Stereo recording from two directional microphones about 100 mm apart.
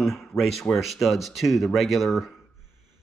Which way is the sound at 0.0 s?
Centre (ahead or behind).